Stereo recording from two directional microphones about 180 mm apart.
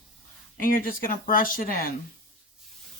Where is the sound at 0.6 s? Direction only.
50° left (ahead or behind).